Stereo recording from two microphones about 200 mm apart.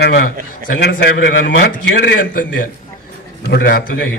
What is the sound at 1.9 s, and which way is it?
A man's voice, 50° left (ahead or behind).